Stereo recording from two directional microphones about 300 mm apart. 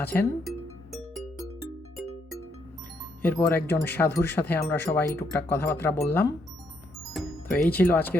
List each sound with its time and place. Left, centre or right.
0.0 s music: centre
3.2 s speech: centre